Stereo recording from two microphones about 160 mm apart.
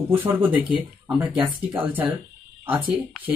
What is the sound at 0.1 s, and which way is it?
A woman's voice, 10° right (ahead or behind).